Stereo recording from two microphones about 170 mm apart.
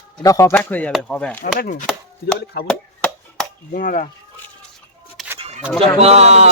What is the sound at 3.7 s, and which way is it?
Chop, 50° left (ahead or behind).